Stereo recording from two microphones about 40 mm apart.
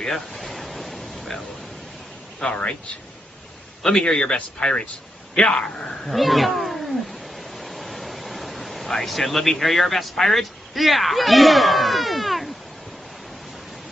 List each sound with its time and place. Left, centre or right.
0.0 s pink noise: centre
2.4 s speech: centre
4.1 s speech: centre
6.0 s cat: centre